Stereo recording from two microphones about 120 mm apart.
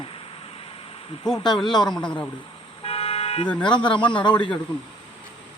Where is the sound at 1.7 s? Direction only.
35° left (ahead or behind).